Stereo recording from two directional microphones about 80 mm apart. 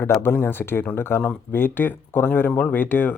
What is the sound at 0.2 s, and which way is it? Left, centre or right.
Speech, left.